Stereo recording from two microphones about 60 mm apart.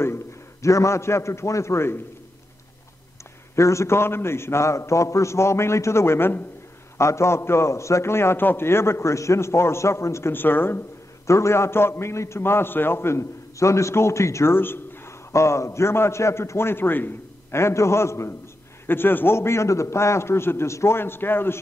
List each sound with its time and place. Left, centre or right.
0.0 s a man's voice: left
3.5 s a man's voice: left
7.0 s a man's voice: left
10.3 s speech: left
11.2 s a man's voice: left
15.3 s a man's voice: left
17.6 s a man's voice: left
18.9 s a man's voice: left